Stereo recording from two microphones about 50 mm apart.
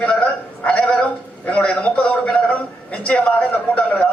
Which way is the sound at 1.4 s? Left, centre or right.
Centre.